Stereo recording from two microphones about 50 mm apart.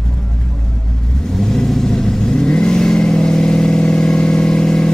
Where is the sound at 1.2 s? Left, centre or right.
Centre.